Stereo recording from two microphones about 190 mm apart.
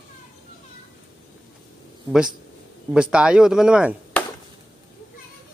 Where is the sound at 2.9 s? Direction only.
5° right (ahead or behind).